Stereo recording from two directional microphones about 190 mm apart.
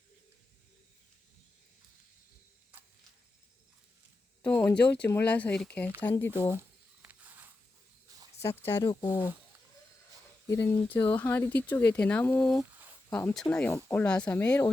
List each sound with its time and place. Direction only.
4.4 s a sound: 10° left (ahead or behind)
5.0 s speech: 10° left (ahead or behind)
6.5 s a sound: 10° right (ahead or behind)
8.4 s speech: 15° left (ahead or behind)
8.8 s speech: 25° left (ahead or behind)
10.4 s speech: 15° left (ahead or behind)